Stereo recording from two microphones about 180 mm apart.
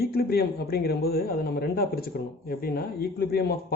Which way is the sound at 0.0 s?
60° left (ahead or behind).